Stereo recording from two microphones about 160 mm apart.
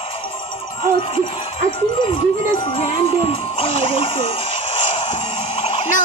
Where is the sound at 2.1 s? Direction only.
40° left (ahead or behind).